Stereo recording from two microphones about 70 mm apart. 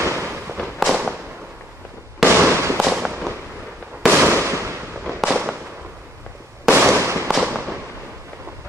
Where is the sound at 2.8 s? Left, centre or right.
Centre.